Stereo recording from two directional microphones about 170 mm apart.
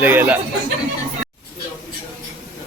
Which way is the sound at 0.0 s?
10° right (ahead or behind).